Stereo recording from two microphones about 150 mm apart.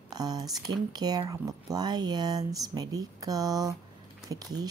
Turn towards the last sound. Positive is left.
turn(degrees=-25)  # may be behind; listen again after turning